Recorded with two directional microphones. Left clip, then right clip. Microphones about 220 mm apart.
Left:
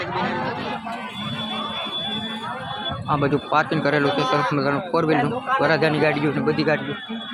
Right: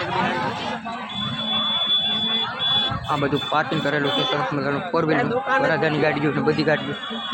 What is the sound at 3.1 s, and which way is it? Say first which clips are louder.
A man's voice: left 4 dB; 5° left (ahead or behind).